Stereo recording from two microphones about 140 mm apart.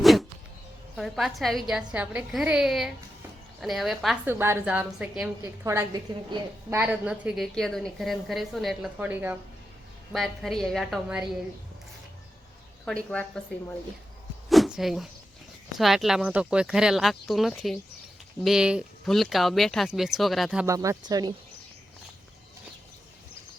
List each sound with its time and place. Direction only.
0.0 s a sound: centre (ahead or behind)
0.9 s speech: centre (ahead or behind)
4.3 s a woman's voice: 15° right (ahead or behind)
5.4 s speech: 20° right (ahead or behind); by 8.9 s centre (ahead or behind)
9.0 s a woman's voice: 15° right (ahead or behind)
10.1 s speech: centre (ahead or behind)
12.8 s a woman's voice: 5° left (ahead or behind)
14.5 s a sound: centre (ahead or behind)
15.8 s speech: centre (ahead or behind)
20.7 s speech: 20° right (ahead or behind)